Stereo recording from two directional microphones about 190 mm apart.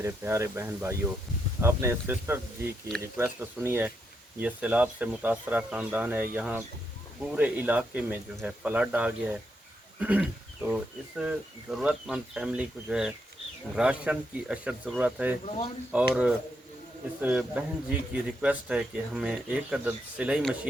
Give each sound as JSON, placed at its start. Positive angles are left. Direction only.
{"t": 0.0, "sound": "speech", "side_deg": -15}
{"t": 15.4, "sound": "speech", "side_deg": 30}
{"t": 15.9, "sound": "speech", "side_deg": -5}